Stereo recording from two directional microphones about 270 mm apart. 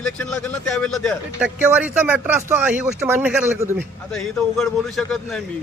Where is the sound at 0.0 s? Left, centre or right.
Centre.